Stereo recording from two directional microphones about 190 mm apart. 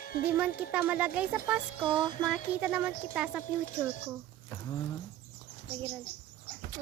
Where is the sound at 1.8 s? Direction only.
25° right (ahead or behind).